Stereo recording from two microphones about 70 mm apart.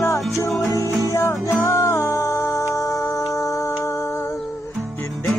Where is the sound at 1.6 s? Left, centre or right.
Left.